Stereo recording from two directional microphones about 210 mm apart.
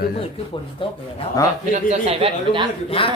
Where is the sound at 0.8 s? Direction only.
25° left (ahead or behind).